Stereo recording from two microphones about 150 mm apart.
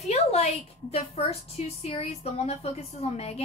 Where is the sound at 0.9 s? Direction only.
45° left (ahead or behind).